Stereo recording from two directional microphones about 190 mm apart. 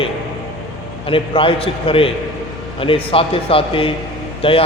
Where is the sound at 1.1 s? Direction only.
30° left (ahead or behind).